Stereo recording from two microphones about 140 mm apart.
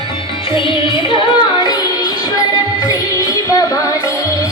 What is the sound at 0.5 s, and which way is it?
Music, 35° left (ahead or behind).